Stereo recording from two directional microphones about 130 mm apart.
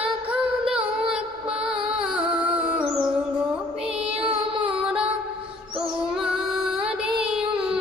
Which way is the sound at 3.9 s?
50° right (ahead or behind).